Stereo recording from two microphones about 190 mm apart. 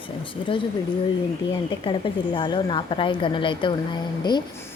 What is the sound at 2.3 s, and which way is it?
Speech, 25° left (ahead or behind).